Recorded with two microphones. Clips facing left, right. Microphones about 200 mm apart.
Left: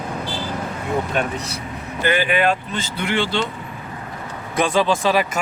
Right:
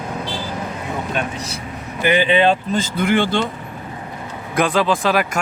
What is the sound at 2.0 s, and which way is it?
Speech, 20° right (ahead or behind).